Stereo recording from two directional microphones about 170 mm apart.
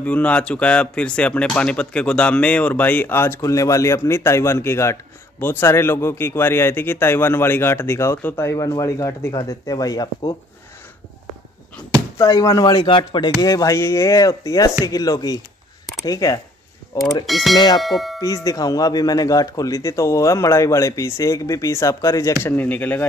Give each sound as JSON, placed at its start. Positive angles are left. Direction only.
{"t": 0.0, "sound": "speech", "side_deg": 10}
{"t": 12.2, "sound": "speech", "side_deg": 20}
{"t": 17.3, "sound": "speech", "side_deg": 0}
{"t": 17.7, "sound": "a sound", "side_deg": 0}
{"t": 18.2, "sound": "speech", "side_deg": 20}